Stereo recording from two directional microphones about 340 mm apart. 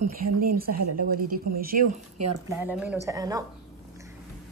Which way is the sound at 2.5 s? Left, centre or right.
Centre.